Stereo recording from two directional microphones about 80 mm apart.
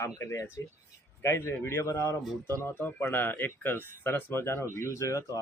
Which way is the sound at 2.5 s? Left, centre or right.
Left.